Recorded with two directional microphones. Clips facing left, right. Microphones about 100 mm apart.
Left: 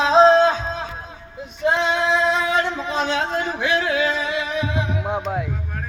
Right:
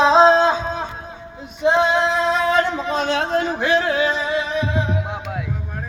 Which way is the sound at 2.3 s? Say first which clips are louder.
Right 2 dB; 45° right (ahead or behind).